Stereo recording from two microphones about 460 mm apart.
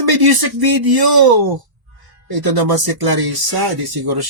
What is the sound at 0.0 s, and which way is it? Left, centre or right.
Speech, right.